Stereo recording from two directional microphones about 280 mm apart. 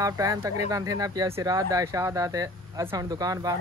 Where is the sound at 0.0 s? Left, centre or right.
Centre.